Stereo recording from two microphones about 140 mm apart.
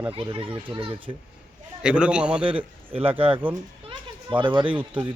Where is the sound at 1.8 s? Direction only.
5° right (ahead or behind).